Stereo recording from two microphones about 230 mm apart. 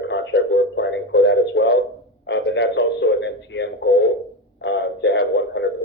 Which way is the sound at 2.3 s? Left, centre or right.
Left.